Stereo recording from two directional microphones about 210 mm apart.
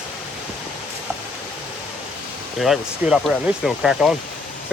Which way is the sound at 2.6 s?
Centre (ahead or behind).